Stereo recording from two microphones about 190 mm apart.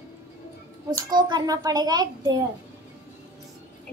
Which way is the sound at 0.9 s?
20° right (ahead or behind).